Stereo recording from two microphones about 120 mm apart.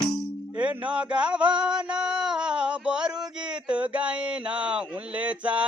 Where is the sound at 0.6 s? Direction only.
10° right (ahead or behind).